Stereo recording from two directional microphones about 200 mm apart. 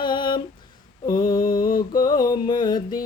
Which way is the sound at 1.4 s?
45° left (ahead or behind).